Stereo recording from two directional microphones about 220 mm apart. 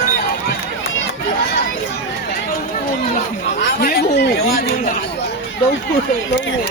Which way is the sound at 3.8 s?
45° left (ahead or behind).